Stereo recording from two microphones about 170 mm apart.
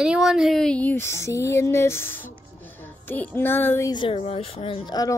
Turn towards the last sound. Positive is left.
turn(degrees=35)  # may be behind; listen again after turning